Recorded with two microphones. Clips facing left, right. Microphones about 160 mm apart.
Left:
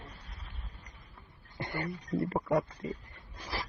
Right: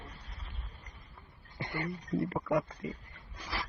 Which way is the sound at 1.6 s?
50° left (ahead or behind).